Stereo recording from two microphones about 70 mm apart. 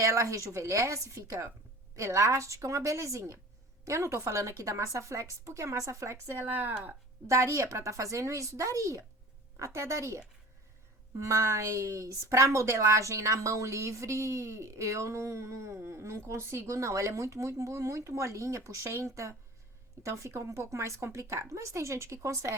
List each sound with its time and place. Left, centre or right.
0.0 s a woman's voice: right
7.3 s a woman's voice: right
11.3 s a woman's voice: right